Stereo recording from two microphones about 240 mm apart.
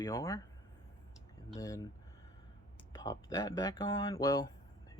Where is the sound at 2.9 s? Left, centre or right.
Centre.